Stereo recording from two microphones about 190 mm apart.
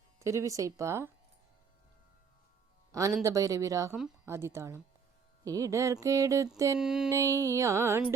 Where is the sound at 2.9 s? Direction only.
15° right (ahead or behind).